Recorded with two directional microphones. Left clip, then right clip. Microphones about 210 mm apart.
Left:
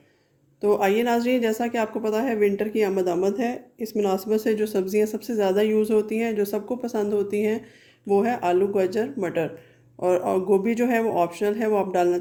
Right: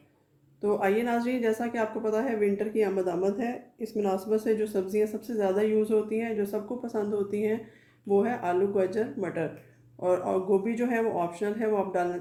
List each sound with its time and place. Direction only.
0.6 s speech: 45° left (ahead or behind)